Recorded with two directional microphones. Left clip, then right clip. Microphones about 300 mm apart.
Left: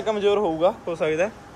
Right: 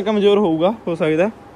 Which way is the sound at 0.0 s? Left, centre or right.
Right.